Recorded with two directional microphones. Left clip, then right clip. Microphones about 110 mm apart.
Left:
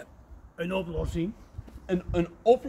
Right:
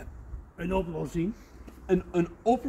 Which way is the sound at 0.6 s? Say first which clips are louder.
Even; 40° left (ahead or behind).